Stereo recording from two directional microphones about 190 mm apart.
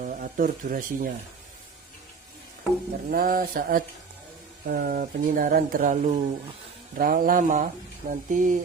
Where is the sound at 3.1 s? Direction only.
50° right (ahead or behind).